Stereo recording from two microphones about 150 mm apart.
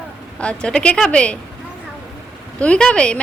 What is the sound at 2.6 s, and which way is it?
Speech, 5° left (ahead or behind).